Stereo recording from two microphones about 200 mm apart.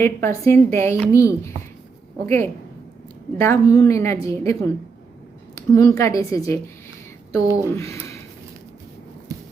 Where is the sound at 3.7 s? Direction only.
15° left (ahead or behind).